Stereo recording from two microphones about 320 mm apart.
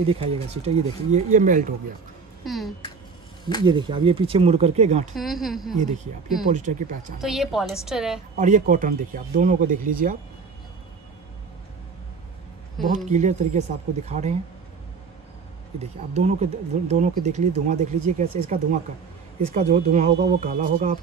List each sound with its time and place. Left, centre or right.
0.0 s speech: centre
2.4 s a woman's voice: centre
3.6 s speech: centre
5.1 s a woman's voice: centre
6.5 s speech: right
7.2 s a woman's voice: centre
8.4 s speech: right
12.9 s speech: right
16.1 s speech: right